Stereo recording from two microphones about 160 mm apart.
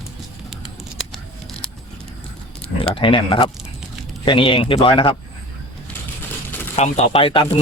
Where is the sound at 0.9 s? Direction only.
Centre (ahead or behind).